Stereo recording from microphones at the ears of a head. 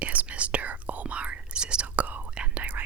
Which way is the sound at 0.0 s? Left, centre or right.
Right.